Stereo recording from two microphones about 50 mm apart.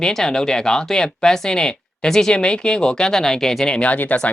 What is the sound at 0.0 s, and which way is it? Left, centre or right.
Speech, centre.